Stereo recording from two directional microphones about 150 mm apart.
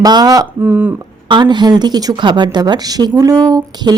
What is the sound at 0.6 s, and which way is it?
Speech, 15° right (ahead or behind).